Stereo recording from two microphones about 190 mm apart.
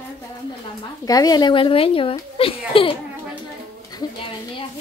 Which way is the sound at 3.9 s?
20° left (ahead or behind).